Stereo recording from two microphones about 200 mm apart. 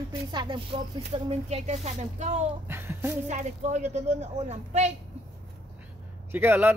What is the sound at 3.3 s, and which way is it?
A woman's voice, 35° right (ahead or behind).